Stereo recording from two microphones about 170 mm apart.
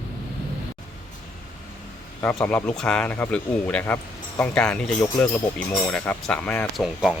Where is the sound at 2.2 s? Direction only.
10° left (ahead or behind).